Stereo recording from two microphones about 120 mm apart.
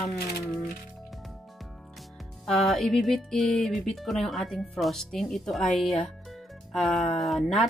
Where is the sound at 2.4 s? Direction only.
Centre (ahead or behind).